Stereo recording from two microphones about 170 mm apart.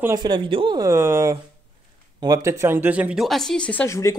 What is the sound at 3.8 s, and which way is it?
Speech, 20° left (ahead or behind).